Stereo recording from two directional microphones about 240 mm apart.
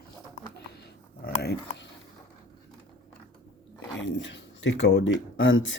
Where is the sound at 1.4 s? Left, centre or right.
Left.